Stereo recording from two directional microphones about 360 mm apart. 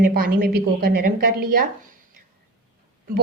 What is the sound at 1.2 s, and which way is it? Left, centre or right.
Speech, right.